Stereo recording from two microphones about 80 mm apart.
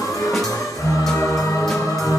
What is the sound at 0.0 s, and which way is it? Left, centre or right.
Music, left.